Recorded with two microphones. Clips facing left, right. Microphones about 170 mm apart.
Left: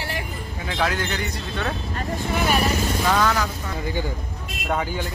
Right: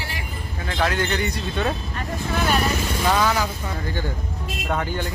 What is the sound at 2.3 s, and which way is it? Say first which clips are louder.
Speech: even; 15° left (ahead or behind).